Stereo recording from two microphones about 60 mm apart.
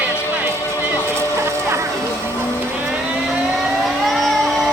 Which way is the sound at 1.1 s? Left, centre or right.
Right.